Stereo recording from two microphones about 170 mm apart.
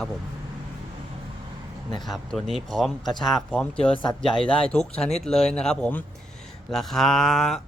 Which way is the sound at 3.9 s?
30° left (ahead or behind).